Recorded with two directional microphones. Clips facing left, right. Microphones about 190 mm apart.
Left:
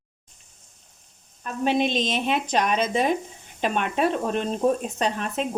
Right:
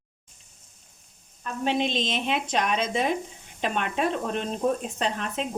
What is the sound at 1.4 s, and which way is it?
Speech, 45° left (ahead or behind).